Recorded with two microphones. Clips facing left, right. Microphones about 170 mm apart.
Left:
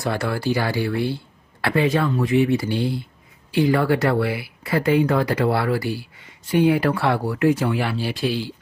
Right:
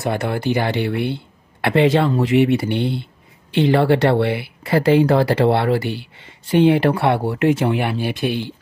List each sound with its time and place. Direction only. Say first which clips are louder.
0.0 s speech: right 2 dB; 20° right (ahead or behind)
1.1 s a sound: right 2 dB; 25° right (ahead or behind)
2.0 s speech: right 4 dB; 30° right (ahead or behind)
2.7 s speech: right 2 dB; 65° right (ahead or behind)
3.5 s speech: right 3 dB; 25° right (ahead or behind)